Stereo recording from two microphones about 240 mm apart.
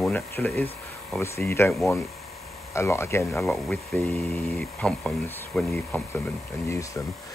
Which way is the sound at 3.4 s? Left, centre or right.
Centre.